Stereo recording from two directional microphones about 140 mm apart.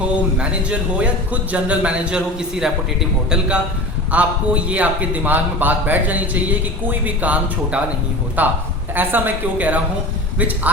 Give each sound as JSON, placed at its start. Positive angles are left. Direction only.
{"t": 0.3, "sound": "a man's voice", "side_deg": -10}